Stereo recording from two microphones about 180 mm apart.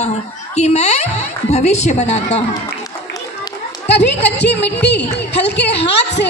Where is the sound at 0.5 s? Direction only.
40° left (ahead or behind).